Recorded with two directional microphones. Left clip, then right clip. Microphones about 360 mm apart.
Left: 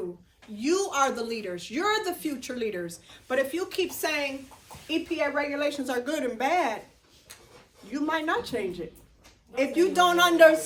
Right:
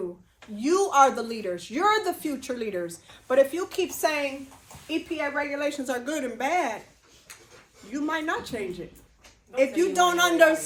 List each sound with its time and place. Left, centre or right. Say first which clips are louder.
0.5 s a woman's voice: right 5 dB; centre
7.9 s a woman's voice: left 1 dB; centre